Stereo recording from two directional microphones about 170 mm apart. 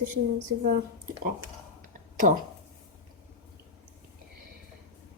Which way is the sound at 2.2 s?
50° right (ahead or behind).